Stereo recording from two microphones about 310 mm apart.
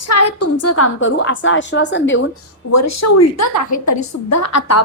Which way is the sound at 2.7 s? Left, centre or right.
Left.